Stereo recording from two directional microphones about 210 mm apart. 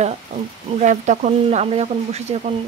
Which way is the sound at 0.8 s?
35° right (ahead or behind).